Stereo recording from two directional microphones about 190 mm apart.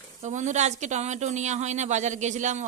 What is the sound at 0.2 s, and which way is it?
Speech, 40° right (ahead or behind).